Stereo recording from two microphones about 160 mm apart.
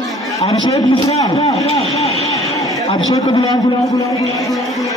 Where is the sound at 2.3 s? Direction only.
20° left (ahead or behind).